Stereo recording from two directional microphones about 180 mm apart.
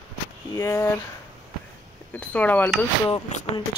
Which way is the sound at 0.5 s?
20° left (ahead or behind).